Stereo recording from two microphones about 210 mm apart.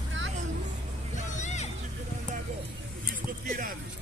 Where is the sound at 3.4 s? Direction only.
40° right (ahead or behind).